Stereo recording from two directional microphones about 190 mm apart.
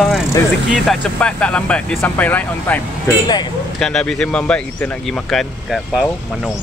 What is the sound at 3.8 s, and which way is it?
Speech, 5° left (ahead or behind).